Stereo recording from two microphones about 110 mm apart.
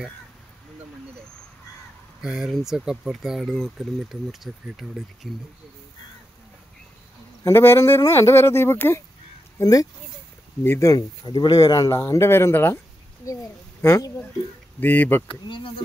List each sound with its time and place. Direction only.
2.2 s speech: 5° right (ahead or behind)
7.4 s speech: 20° left (ahead or behind)
9.6 s speech: 35° left (ahead or behind); by 15.2 s 20° left (ahead or behind)
15.4 s speech: 45° left (ahead or behind)